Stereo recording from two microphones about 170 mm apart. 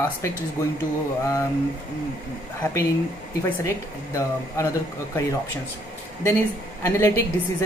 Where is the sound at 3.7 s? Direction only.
20° left (ahead or behind).